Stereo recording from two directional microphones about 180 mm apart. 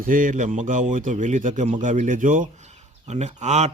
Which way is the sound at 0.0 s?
50° right (ahead or behind).